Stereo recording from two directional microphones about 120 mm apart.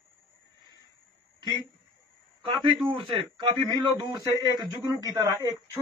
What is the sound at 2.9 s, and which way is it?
A man's voice, 40° right (ahead or behind).